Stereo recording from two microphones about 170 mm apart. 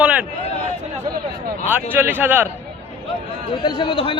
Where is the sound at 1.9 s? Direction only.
10° right (ahead or behind).